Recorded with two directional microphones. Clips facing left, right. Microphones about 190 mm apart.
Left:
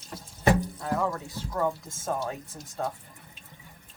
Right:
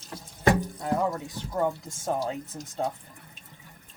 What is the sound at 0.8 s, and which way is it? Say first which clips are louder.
Speech: right 2 dB; 20° right (ahead or behind).